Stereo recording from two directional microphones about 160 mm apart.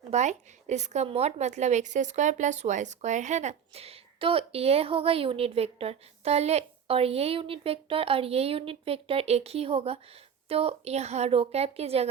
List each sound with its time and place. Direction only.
0.1 s a woman's voice: 45° right (ahead or behind)